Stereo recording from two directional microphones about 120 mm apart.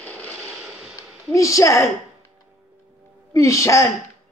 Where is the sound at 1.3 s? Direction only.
25° left (ahead or behind).